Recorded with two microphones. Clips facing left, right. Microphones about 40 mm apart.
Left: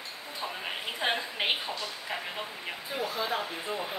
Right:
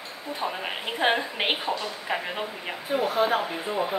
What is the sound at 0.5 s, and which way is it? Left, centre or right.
A woman's voice, right.